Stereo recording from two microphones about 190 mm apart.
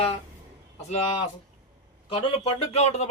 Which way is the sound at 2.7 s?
35° left (ahead or behind).